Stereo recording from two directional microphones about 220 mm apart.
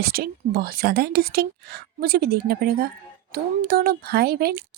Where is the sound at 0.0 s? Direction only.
45° right (ahead or behind).